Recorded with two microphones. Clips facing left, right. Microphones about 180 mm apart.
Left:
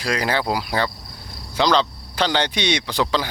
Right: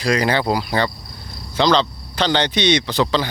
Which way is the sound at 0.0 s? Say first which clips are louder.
Right 4 dB; 5° left (ahead or behind).